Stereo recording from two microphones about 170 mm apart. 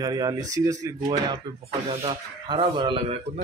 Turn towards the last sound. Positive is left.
turn(degrees=-30)  # may be behind; listen again after turning